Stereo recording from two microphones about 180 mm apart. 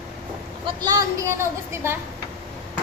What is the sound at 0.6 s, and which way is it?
Speech, 20° right (ahead or behind).